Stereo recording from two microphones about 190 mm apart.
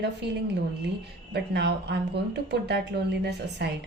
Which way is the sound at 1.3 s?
60° right (ahead or behind).